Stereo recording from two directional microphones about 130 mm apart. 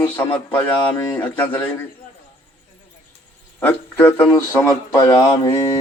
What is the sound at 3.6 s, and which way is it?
A man's voice, 15° left (ahead or behind).